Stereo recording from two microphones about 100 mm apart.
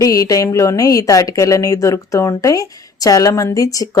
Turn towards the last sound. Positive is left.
turn(degrees=35)  # may be behind; listen again after turning